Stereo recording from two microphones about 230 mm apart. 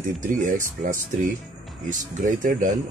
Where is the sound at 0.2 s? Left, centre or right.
Right.